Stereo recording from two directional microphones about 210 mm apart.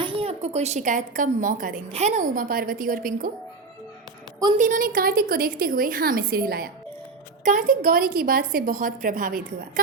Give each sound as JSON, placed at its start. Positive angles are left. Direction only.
{"t": 0.0, "sound": "a woman's voice", "side_deg": -25}
{"t": 4.5, "sound": "a woman's voice", "side_deg": -40}